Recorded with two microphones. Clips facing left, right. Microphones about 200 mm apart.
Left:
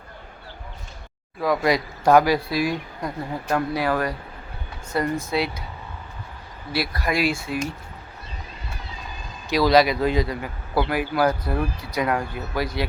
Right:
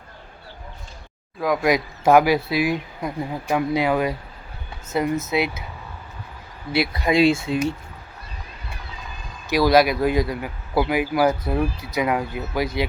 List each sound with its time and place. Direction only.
1.4 s speech: centre (ahead or behind)
6.7 s speech: 25° right (ahead or behind)
9.5 s speech: 5° right (ahead or behind)